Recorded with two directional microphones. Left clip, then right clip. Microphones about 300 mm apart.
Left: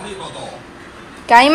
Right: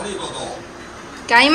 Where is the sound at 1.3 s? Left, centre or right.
Centre.